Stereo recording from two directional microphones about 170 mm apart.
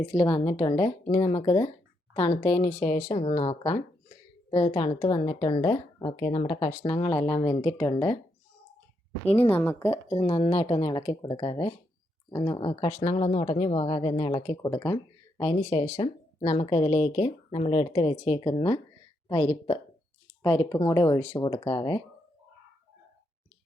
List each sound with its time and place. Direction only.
0.0 s speech: 30° left (ahead or behind)
2.6 s speech: 10° left (ahead or behind)
3.1 s speech: 40° left (ahead or behind); by 8.2 s 20° left (ahead or behind)
9.5 s speech: 10° left (ahead or behind)
10.2 s speech: 35° left (ahead or behind); by 14.9 s 20° left (ahead or behind)
15.4 s speech: 35° left (ahead or behind)
20.4 s speech: 20° left (ahead or behind)